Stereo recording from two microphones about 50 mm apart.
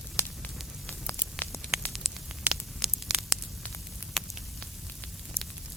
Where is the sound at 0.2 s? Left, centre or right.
Left.